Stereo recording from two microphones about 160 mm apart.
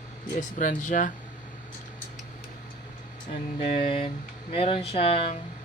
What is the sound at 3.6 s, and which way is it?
Speech, 35° left (ahead or behind).